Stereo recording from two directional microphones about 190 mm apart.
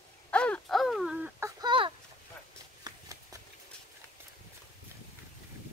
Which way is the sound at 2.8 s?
20° right (ahead or behind).